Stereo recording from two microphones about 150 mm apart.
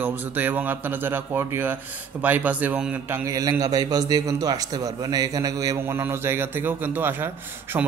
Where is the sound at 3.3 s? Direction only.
20° right (ahead or behind).